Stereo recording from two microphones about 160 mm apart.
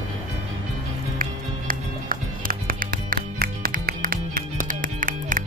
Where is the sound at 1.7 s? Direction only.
60° right (ahead or behind).